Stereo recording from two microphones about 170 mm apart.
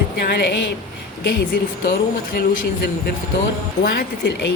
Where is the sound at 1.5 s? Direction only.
65° left (ahead or behind).